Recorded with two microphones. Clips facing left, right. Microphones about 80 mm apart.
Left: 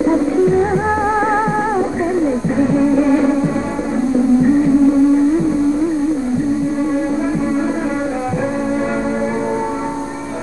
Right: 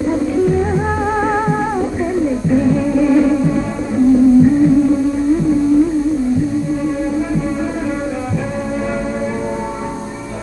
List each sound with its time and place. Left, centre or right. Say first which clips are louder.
0.0 s music: left 2 dB; left